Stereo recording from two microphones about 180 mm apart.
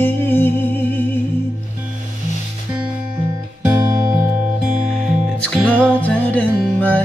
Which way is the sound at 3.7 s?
15° right (ahead or behind).